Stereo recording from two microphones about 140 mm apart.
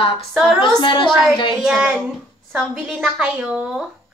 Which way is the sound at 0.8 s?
35° left (ahead or behind).